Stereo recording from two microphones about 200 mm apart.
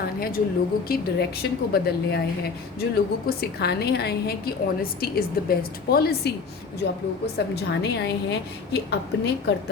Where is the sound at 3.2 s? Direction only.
55° left (ahead or behind).